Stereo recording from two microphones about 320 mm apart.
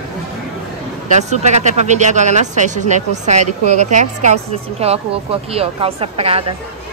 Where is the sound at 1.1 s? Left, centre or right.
Right.